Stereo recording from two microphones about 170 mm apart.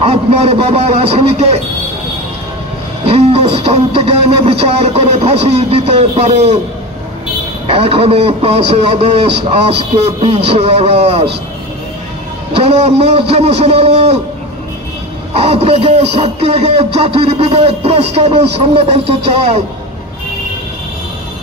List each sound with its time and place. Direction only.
0.0 s speech: 35° right (ahead or behind)
3.1 s speech: 35° right (ahead or behind)
7.7 s speech: 35° right (ahead or behind)
12.5 s speech: 35° right (ahead or behind)
15.3 s speech: 35° right (ahead or behind)